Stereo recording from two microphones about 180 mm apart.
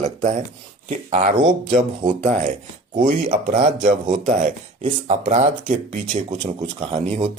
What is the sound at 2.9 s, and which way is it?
Speech, 45° right (ahead or behind).